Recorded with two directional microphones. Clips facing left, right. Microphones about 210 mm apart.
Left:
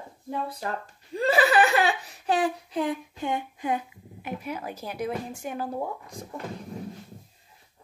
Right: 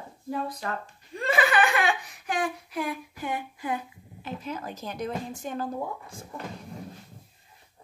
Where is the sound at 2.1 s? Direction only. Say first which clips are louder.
Left 5 dB; 35° left (ahead or behind).